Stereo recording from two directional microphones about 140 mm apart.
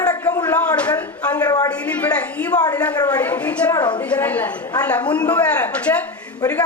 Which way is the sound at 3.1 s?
10° left (ahead or behind).